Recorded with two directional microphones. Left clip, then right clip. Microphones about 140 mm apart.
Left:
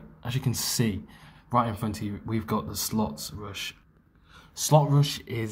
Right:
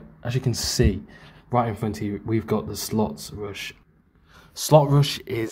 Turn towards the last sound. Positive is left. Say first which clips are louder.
# right 5 dB
turn(degrees=-65)  # may be behind; listen again after turning